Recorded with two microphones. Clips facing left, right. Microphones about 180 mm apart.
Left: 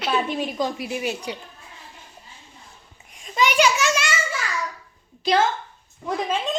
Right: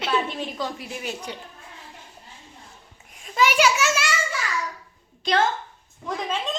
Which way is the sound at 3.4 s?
5° right (ahead or behind).